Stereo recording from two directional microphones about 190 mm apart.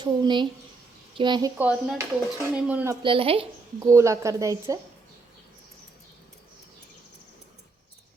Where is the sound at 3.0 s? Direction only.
30° right (ahead or behind).